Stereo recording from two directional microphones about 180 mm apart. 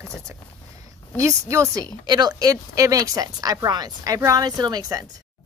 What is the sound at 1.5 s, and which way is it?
Speech, 15° right (ahead or behind).